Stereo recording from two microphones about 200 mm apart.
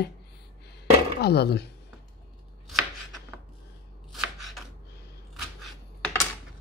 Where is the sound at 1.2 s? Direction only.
55° left (ahead or behind).